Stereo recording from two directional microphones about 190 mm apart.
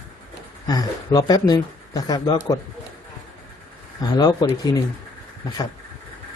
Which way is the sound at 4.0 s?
20° left (ahead or behind).